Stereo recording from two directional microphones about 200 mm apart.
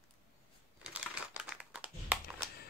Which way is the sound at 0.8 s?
5° right (ahead or behind).